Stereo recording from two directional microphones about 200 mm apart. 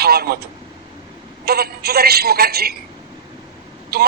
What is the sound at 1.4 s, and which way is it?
A woman's voice, 50° right (ahead or behind).